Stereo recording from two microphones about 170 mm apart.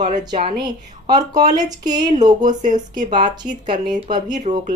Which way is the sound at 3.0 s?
30° right (ahead or behind).